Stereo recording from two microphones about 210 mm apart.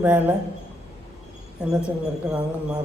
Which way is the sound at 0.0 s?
10° right (ahead or behind).